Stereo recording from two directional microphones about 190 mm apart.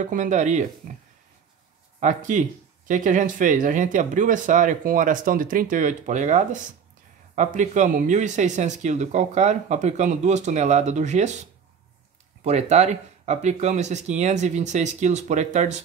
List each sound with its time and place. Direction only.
0.0 s speech: 40° right (ahead or behind)
2.0 s speech: 40° right (ahead or behind)
12.4 s speech: 35° right (ahead or behind)